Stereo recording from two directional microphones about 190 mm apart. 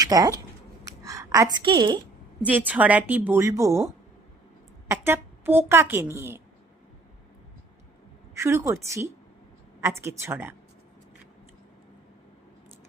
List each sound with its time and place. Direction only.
0.0 s speech: 20° right (ahead or behind)
0.9 s a sound: 15° right (ahead or behind)
2.5 s a woman's voice: 10° right (ahead or behind)
4.9 s a woman's voice: 10° right (ahead or behind)
8.4 s a woman's voice: 15° right (ahead or behind)